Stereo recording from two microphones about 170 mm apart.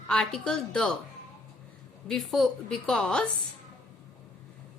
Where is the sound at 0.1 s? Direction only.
5° left (ahead or behind).